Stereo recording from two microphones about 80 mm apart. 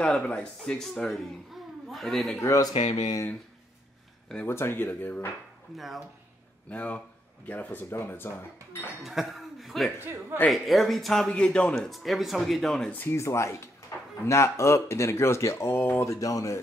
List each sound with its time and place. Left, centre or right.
0.0 s speech: centre
2.4 s speech: left
4.5 s speech: left
5.8 s speech: centre
6.7 s speech: centre
9.0 s speech: centre
11.8 s speech: centre
12.9 s speech: left
16.1 s speech: left